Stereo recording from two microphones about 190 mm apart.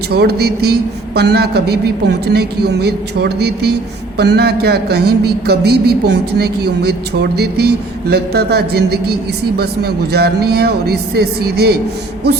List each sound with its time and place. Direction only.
0.1 s a man's voice: 55° right (ahead or behind)